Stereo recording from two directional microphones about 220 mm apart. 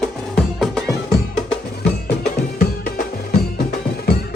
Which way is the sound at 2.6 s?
40° left (ahead or behind).